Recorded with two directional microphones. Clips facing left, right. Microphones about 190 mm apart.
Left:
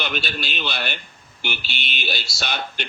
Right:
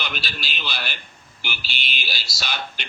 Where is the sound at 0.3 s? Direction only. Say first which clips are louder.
Left 5 dB; 50° left (ahead or behind).